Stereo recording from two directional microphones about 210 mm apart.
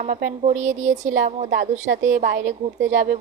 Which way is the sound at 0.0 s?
40° right (ahead or behind).